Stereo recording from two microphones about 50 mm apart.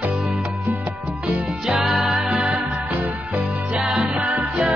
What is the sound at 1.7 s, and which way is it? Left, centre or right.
Music, centre.